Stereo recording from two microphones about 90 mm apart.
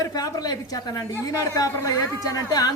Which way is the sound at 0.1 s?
45° left (ahead or behind).